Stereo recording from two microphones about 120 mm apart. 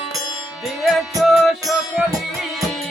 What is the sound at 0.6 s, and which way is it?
Music, centre (ahead or behind).